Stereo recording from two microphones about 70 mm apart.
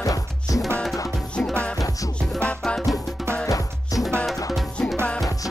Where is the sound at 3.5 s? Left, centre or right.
Left.